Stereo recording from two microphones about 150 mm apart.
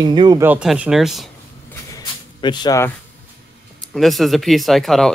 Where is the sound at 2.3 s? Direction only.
30° left (ahead or behind).